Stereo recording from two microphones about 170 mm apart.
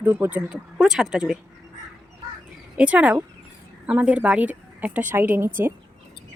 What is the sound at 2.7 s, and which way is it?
A woman's voice, 10° right (ahead or behind).